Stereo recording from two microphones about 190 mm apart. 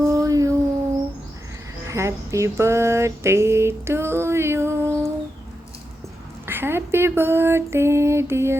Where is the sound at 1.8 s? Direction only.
15° right (ahead or behind).